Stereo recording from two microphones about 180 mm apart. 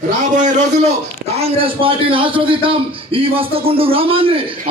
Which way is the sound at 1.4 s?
30° right (ahead or behind).